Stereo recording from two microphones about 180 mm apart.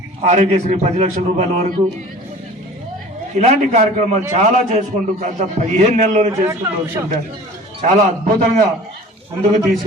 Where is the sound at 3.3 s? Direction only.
40° right (ahead or behind).